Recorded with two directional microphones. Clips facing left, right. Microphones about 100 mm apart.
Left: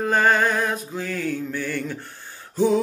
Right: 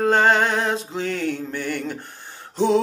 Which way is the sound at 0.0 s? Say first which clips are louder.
Right 2 dB; 25° right (ahead or behind).